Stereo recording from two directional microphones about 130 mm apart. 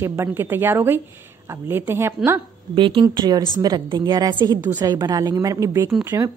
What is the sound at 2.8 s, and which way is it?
A woman's voice, 40° right (ahead or behind).